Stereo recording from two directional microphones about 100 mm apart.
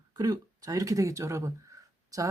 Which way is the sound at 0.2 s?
35° right (ahead or behind).